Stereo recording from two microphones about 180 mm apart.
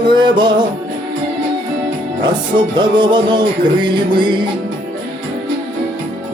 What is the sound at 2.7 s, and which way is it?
Music, 25° right (ahead or behind).